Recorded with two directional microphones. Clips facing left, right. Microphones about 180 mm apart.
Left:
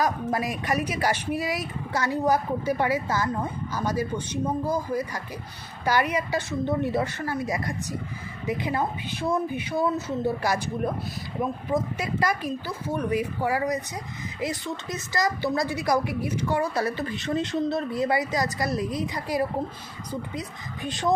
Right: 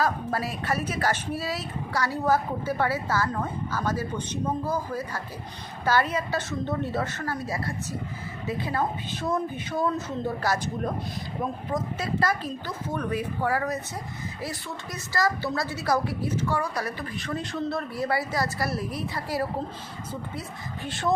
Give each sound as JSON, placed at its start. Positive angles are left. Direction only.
{"t": 0.0, "sound": "a woman's voice", "side_deg": 15}
{"t": 11.7, "sound": "a woman's voice", "side_deg": 15}
{"t": 20.8, "sound": "a woman's voice", "side_deg": 15}